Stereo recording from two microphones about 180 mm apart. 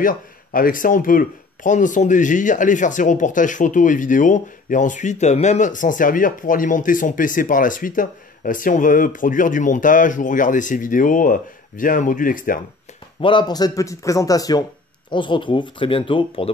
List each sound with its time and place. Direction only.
0.0 s speech: 50° left (ahead or behind)
13.2 s speech: 25° left (ahead or behind)